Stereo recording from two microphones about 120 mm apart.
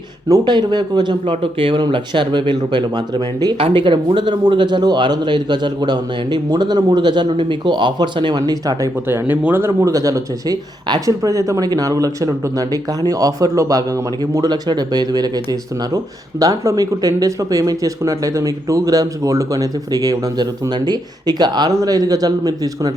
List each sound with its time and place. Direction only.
0.3 s a man's voice: 35° right (ahead or behind)
1.3 s a man's voice: 50° right (ahead or behind); by 8.9 s 30° right (ahead or behind)
9.0 s a man's voice: 15° right (ahead or behind); by 15.3 s 35° right (ahead or behind)
16.4 s speech: 30° right (ahead or behind)